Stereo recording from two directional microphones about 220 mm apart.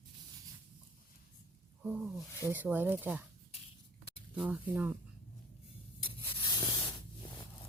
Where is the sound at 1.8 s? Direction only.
5° right (ahead or behind).